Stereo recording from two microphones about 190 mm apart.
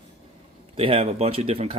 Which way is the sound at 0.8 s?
30° right (ahead or behind).